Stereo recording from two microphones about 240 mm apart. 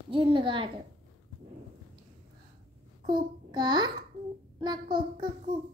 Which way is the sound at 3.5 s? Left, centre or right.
Centre.